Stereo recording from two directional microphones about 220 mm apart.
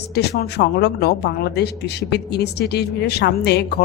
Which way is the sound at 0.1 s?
45° left (ahead or behind).